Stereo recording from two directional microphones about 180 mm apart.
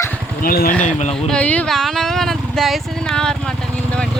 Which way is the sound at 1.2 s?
5° left (ahead or behind).